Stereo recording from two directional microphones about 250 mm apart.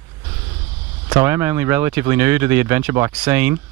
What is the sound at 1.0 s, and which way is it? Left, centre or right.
Speech, centre.